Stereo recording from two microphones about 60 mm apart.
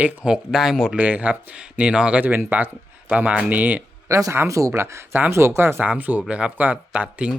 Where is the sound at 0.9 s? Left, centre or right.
Right.